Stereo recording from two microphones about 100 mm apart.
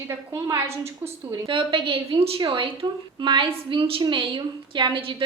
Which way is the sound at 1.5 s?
55° right (ahead or behind).